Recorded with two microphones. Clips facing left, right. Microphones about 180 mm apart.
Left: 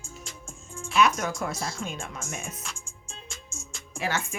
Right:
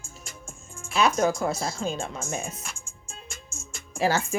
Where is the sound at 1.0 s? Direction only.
30° right (ahead or behind).